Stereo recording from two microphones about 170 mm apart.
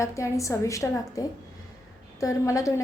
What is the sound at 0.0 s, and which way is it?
A woman's voice, 15° left (ahead or behind).